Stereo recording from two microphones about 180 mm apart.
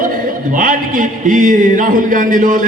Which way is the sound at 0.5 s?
50° right (ahead or behind).